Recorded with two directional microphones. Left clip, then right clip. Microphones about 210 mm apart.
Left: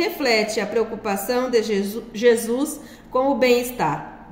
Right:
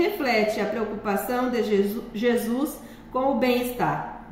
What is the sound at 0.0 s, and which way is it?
A woman's voice, 50° left (ahead or behind).